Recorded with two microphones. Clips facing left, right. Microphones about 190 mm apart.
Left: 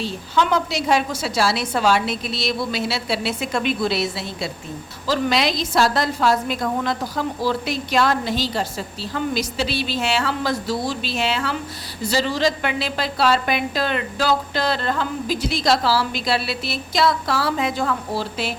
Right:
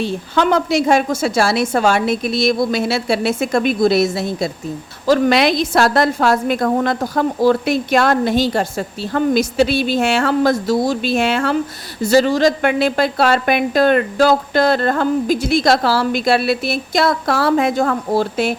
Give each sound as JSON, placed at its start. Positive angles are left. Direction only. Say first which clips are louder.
{"t": 0.0, "sound": "a woman's voice", "louder": "right 5 dB", "side_deg": -55}